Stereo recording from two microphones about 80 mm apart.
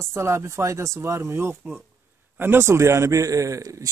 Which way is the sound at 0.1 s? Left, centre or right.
Right.